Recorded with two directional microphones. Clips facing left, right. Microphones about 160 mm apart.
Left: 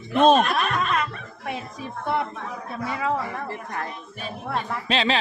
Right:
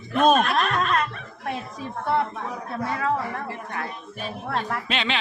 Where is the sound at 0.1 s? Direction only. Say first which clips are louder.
Left 2 dB; 25° left (ahead or behind).